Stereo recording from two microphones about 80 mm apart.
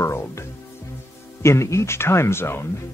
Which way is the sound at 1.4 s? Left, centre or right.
Left.